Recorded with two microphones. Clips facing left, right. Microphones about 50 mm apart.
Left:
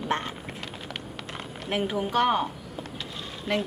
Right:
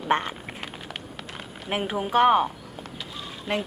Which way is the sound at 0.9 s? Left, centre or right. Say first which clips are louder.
Left 1 dB; centre.